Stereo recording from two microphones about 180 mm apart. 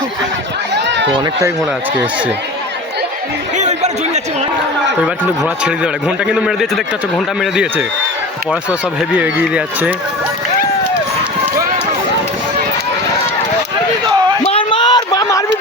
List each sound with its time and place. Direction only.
0.7 s run: 75° right (ahead or behind)
1.1 s speech: 20° right (ahead or behind)
3.6 s a sound: 40° right (ahead or behind)
5.0 s a man's voice: 5° right (ahead or behind)
9.1 s speech: 5° right (ahead or behind)
14.4 s a sound: 30° left (ahead or behind)